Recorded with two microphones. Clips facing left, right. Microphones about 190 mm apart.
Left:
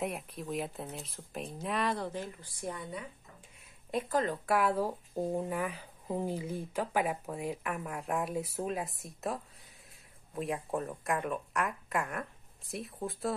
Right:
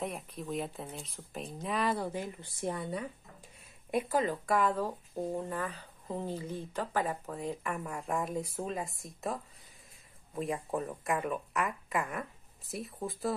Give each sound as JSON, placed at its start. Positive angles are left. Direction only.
{"t": 0.0, "sound": "speech", "side_deg": 0}
{"t": 2.4, "sound": "speech", "side_deg": -25}
{"t": 3.9, "sound": "speech", "side_deg": -10}